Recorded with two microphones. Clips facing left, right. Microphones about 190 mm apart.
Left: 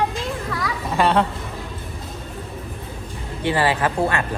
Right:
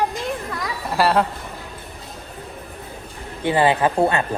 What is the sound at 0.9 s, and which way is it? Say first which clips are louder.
Speech: even; 5° right (ahead or behind).